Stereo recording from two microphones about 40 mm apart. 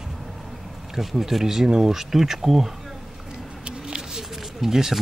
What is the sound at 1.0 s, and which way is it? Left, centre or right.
Speech, centre.